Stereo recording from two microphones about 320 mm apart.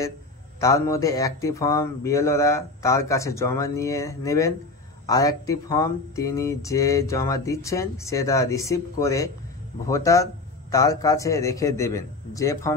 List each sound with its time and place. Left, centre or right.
0.6 s speech: centre